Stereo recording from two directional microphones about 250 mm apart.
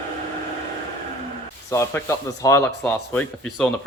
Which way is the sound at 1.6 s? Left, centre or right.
Centre.